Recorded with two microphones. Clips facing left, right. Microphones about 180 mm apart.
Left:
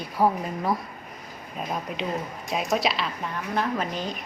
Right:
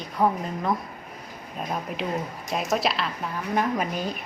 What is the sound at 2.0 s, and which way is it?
A woman's voice, 5° right (ahead or behind).